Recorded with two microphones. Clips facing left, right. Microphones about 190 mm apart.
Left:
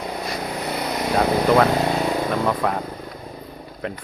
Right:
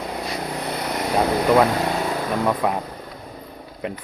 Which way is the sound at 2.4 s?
10° right (ahead or behind).